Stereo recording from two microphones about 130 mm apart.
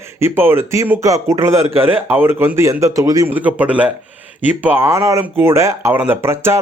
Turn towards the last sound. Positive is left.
turn(degrees=-20)  # may be behind; listen again after turning